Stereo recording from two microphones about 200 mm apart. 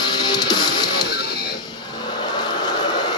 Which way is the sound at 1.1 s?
50° left (ahead or behind).